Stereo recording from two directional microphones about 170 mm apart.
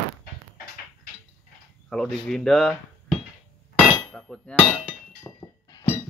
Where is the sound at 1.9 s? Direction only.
5° left (ahead or behind).